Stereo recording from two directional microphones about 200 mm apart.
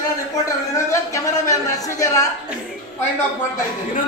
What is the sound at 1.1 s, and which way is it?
Speech, 15° left (ahead or behind).